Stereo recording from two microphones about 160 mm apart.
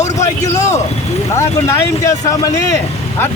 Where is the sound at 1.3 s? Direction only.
15° left (ahead or behind).